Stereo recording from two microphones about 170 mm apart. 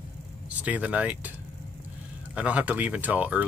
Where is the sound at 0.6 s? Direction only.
10° right (ahead or behind).